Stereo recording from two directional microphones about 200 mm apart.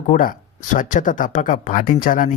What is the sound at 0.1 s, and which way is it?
Speech, 40° left (ahead or behind).